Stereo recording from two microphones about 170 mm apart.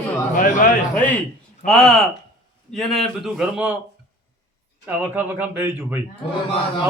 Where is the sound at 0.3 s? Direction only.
50° left (ahead or behind).